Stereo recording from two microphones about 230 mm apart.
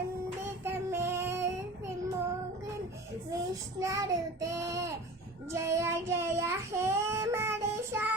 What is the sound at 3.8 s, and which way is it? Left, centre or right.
Child singing, centre.